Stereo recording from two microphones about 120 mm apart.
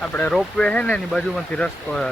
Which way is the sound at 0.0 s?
15° left (ahead or behind).